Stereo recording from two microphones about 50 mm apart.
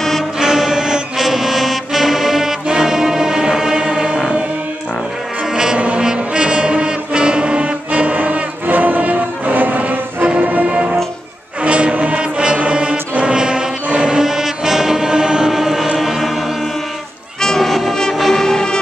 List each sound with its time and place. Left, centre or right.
0.4 s brass instrument: centre
5.5 s brass instrument: centre
13.9 s music: centre
16.0 s choir: centre
17.4 s music: centre